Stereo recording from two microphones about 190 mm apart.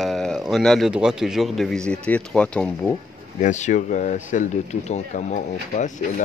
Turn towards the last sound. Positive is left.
turn(degrees=40)  # may be behind; listen again after turning